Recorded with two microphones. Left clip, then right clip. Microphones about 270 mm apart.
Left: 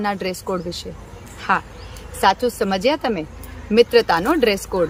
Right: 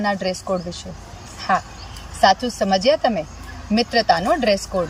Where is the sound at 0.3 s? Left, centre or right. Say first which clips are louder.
Right 1 dB; left.